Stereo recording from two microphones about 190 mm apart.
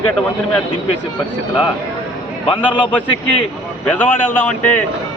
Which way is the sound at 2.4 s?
25° left (ahead or behind).